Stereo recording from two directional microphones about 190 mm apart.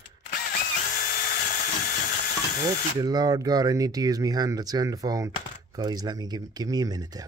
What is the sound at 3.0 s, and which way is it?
Speech, 20° right (ahead or behind).